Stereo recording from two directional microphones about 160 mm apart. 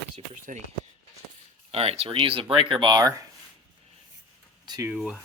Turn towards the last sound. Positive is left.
turn(degrees=-5)  # may be behind; listen again after turning